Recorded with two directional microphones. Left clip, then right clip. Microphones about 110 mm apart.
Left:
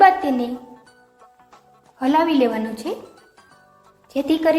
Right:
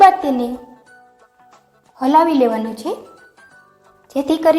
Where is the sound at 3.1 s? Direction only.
Centre (ahead or behind).